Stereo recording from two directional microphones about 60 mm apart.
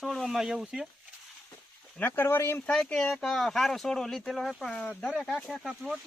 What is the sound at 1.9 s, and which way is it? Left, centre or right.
Speech, left.